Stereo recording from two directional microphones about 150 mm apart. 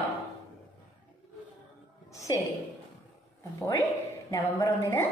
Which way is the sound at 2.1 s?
20° left (ahead or behind).